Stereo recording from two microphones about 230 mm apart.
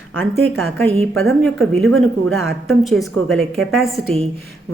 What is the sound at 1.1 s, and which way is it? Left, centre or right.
Speech, right.